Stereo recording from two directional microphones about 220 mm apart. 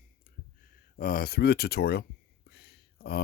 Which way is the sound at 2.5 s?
45° left (ahead or behind).